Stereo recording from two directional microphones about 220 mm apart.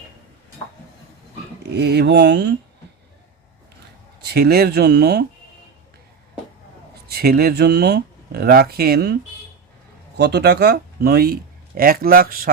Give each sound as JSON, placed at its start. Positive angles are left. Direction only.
{"t": 1.7, "sound": "speech", "side_deg": -50}
{"t": 4.2, "sound": "speech", "side_deg": -45}
{"t": 7.1, "sound": "speech", "side_deg": -45}
{"t": 10.2, "sound": "speech", "side_deg": -50}